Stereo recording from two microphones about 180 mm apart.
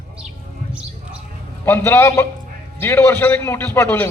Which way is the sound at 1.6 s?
15° left (ahead or behind).